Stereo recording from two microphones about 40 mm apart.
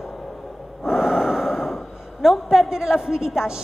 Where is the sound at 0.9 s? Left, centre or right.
Centre.